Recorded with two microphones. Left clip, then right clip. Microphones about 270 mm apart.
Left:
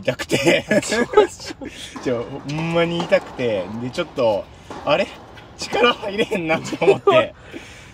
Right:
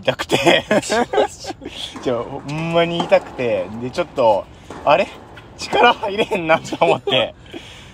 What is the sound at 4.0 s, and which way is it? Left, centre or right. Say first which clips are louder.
Speech: right 4 dB; right.